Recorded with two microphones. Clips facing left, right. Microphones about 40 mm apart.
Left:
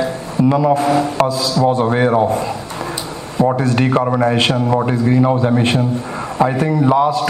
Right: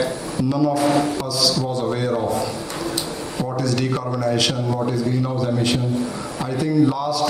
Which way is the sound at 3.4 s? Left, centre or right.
Left.